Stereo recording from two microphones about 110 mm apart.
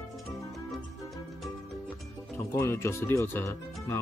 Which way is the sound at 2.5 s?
25° left (ahead or behind).